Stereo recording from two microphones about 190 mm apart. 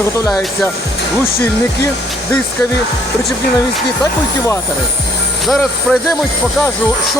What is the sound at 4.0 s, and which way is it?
Speech, 15° left (ahead or behind).